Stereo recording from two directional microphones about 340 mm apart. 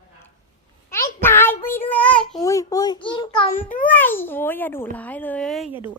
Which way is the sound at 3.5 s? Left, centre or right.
Left.